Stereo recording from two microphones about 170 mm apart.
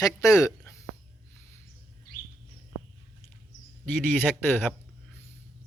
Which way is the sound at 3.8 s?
10° left (ahead or behind).